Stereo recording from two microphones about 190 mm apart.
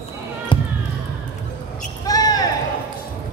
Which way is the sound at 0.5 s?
25° left (ahead or behind).